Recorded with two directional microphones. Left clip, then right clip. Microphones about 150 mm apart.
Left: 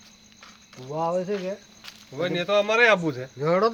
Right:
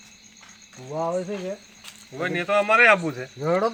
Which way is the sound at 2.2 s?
75° left (ahead or behind).